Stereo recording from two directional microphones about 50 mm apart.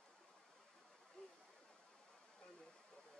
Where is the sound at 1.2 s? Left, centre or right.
Left.